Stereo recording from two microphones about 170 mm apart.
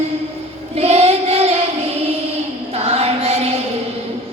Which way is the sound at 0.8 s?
35° right (ahead or behind).